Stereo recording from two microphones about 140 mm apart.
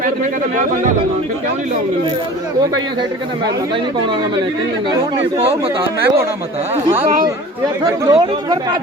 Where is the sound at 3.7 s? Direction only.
35° right (ahead or behind).